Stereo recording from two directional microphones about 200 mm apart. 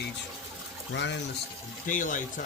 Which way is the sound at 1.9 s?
40° left (ahead or behind).